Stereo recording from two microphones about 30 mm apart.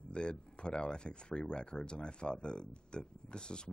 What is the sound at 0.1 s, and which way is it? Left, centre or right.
A man's voice, left.